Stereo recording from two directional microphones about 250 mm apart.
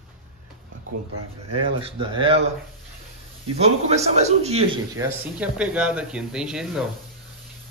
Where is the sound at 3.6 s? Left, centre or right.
Right.